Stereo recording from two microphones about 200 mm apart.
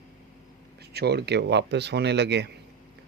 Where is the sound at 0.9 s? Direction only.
55° right (ahead or behind).